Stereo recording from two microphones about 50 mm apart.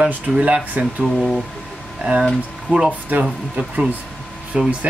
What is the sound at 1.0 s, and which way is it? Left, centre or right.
Speech, centre.